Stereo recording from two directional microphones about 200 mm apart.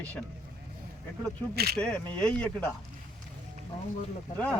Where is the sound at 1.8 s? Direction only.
5° left (ahead or behind).